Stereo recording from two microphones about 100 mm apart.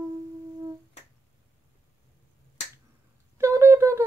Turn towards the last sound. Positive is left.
turn(degrees=-30)  # may be behind; listen again after turning